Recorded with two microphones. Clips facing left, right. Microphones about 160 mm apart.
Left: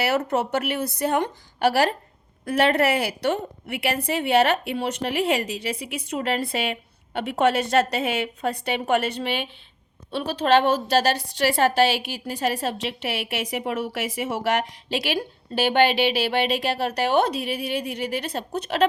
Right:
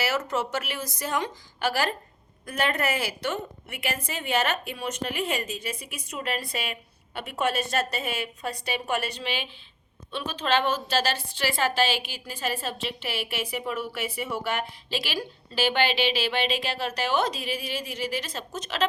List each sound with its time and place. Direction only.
0.3 s a woman's voice: 60° left (ahead or behind)